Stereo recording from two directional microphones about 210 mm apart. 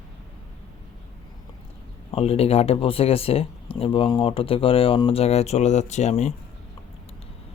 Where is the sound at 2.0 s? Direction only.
30° left (ahead or behind).